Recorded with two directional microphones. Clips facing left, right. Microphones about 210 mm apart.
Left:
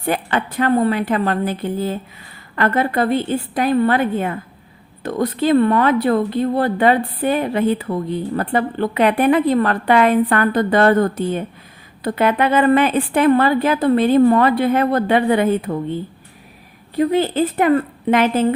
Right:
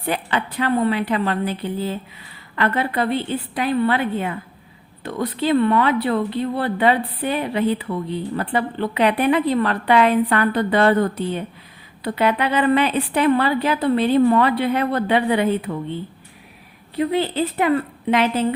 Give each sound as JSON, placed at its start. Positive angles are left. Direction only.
{"t": 0.0, "sound": "speech", "side_deg": 45}